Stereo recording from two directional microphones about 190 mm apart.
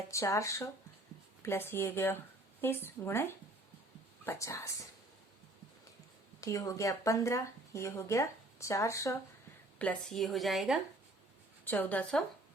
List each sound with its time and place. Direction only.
0.1 s speech: 15° left (ahead or behind)
6.4 s speech: 15° left (ahead or behind)